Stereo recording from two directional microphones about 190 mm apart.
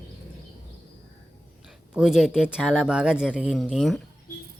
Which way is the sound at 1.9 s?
5° right (ahead or behind).